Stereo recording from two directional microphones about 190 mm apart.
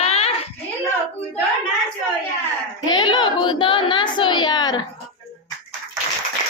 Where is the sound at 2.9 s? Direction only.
25° left (ahead or behind).